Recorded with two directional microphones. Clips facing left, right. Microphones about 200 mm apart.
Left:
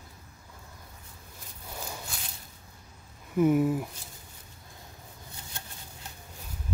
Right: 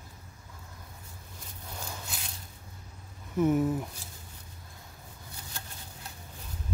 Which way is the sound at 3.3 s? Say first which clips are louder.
Left 2 dB; 10° left (ahead or behind).